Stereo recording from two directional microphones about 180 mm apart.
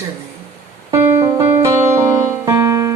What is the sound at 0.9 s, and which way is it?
Music, 15° right (ahead or behind).